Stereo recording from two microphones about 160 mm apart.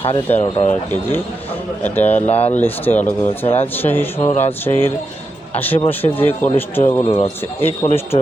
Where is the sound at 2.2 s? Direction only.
40° left (ahead or behind).